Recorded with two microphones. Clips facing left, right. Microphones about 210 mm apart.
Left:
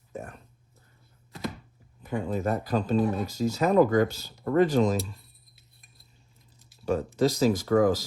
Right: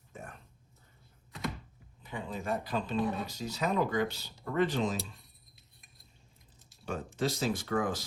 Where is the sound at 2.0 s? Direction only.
45° left (ahead or behind).